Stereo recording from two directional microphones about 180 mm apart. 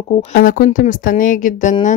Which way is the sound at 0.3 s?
50° left (ahead or behind).